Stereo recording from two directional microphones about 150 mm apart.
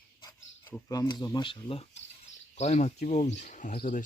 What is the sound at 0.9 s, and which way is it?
Speech, 25° left (ahead or behind).